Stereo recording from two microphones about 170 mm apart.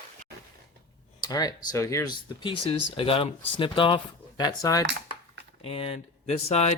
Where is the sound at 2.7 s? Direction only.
35° left (ahead or behind).